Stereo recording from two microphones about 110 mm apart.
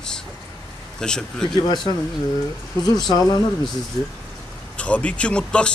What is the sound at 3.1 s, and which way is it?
Speech, 35° left (ahead or behind).